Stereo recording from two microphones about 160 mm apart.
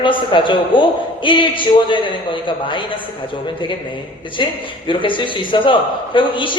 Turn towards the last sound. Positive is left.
turn(degrees=30)  # may be behind; listen again after turning